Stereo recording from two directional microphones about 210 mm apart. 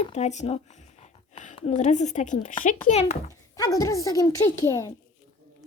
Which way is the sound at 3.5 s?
15° left (ahead or behind).